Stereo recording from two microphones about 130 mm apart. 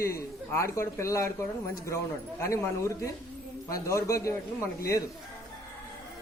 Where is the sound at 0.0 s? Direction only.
20° left (ahead or behind).